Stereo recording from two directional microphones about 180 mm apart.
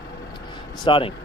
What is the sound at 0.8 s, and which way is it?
Speech, 30° left (ahead or behind).